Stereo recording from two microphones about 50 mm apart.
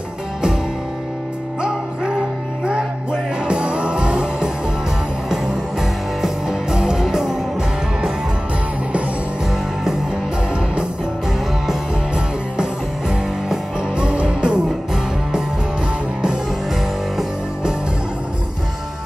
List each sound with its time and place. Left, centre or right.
1.6 s music: centre
13.1 s music: centre